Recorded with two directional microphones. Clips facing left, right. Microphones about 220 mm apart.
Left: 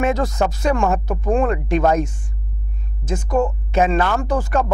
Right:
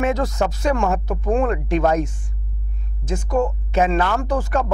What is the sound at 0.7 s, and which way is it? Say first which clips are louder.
Speech: left 2 dB; 20° left (ahead or behind).